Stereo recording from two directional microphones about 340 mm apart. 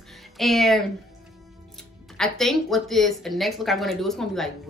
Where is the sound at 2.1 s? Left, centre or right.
Centre.